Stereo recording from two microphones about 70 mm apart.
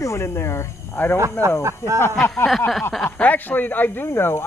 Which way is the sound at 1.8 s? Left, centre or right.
Left.